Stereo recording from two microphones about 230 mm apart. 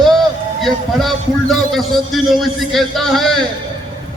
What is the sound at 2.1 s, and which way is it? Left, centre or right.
A man's voice, centre.